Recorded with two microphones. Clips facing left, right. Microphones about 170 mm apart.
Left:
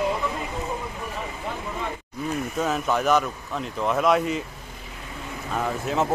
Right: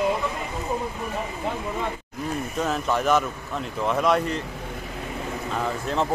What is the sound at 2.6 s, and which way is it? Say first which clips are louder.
Speech: even; centre (ahead or behind).